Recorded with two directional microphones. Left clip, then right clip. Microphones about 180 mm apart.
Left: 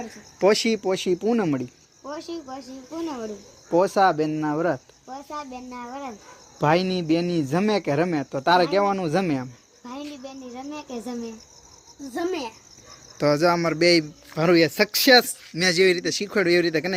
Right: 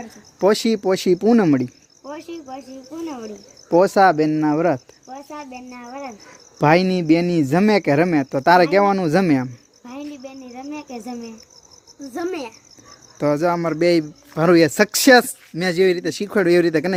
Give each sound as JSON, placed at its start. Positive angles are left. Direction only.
{"t": 0.3, "sound": "speech", "side_deg": -35}
{"t": 0.8, "sound": "speech", "side_deg": -65}
{"t": 2.0, "sound": "speech", "side_deg": -15}
{"t": 3.7, "sound": "speech", "side_deg": -75}
{"t": 5.1, "sound": "speech", "side_deg": -15}
{"t": 6.6, "sound": "speech", "side_deg": -75}
{"t": 9.8, "sound": "speech", "side_deg": -20}
{"t": 12.1, "sound": "a child's voice", "side_deg": 5}
{"t": 13.1, "sound": "speech", "side_deg": -20}
{"t": 14.3, "sound": "speech", "side_deg": -55}
{"t": 15.5, "sound": "speech", "side_deg": -35}